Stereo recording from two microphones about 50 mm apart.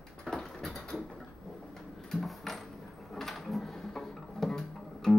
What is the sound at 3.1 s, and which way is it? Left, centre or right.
Music, centre.